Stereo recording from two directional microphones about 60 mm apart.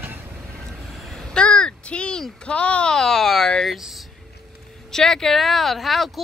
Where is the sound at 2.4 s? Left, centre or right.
Centre.